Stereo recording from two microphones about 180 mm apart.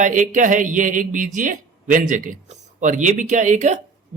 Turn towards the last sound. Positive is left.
turn(degrees=-40)  # may be behind; listen again after turning